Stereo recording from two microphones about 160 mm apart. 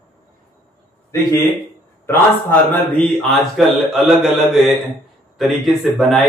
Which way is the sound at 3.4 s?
Centre (ahead or behind).